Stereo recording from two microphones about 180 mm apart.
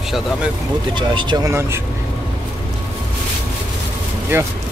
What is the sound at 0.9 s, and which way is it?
Speech, 25° right (ahead or behind).